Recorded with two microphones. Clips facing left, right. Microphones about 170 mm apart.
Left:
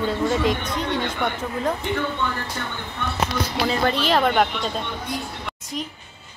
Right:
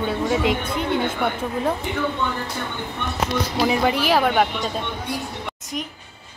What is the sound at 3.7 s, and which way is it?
Speech, 10° right (ahead or behind).